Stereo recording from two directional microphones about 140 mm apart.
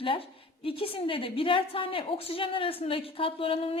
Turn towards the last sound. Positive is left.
turn(degrees=40)  # may be behind; listen again after turning